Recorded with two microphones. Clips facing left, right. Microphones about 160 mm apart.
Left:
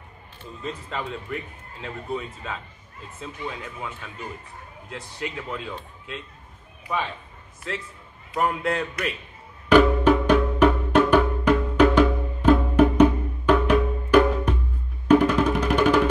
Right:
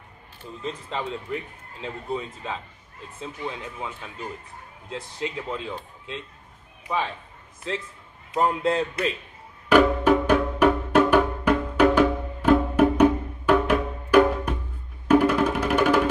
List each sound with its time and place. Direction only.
0.8 s speech: 20° right (ahead or behind)
7.7 s speech: 25° right (ahead or behind)
9.7 s music: 10° right (ahead or behind)